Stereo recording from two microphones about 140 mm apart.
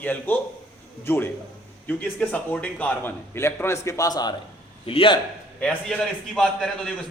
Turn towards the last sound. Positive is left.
turn(degrees=5)  # may be behind; listen again after turning